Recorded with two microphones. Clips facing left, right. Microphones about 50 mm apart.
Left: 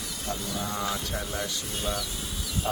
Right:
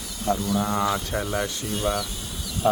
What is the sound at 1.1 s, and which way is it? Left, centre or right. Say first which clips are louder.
Speech: right 6 dB; right.